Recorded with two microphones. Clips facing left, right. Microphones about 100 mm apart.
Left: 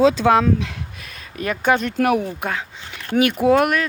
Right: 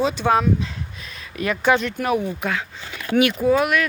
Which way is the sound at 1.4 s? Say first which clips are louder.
Even; 45° left (ahead or behind).